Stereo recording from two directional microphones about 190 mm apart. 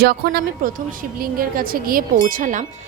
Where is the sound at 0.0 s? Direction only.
55° right (ahead or behind).